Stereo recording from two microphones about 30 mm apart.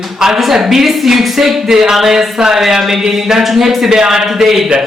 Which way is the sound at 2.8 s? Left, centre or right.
Centre.